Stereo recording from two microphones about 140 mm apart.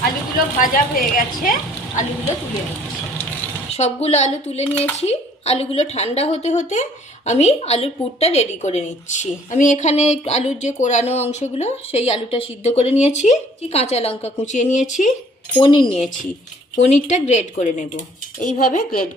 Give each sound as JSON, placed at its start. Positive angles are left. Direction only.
{"t": 0.6, "sound": "a woman's voice", "side_deg": 85}
{"t": 3.7, "sound": "a woman's voice", "side_deg": 50}
{"t": 15.6, "sound": "speech", "side_deg": 40}
{"t": 16.7, "sound": "speech", "side_deg": 55}